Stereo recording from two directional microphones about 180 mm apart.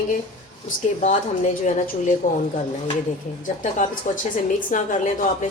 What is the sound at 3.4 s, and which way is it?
A woman's voice, 45° left (ahead or behind).